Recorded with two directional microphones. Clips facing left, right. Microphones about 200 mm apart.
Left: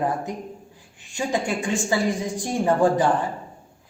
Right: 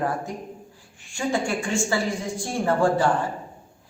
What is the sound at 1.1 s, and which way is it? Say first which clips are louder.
A woman's voice: even; 20° left (ahead or behind).